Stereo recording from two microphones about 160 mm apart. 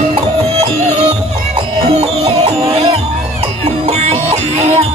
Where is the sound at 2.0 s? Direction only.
40° right (ahead or behind).